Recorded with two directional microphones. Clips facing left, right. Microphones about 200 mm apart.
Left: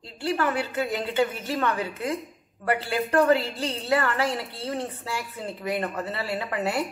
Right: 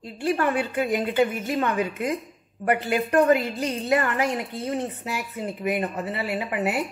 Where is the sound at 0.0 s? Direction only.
20° right (ahead or behind).